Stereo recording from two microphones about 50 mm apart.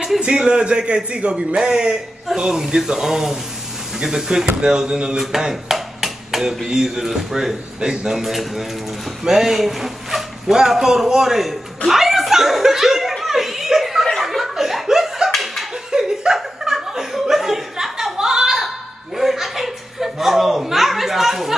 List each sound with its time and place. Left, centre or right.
0.2 s a man's voice: centre
11.9 s chuckle: centre
14.0 s laughter: centre
15.9 s chuckle: centre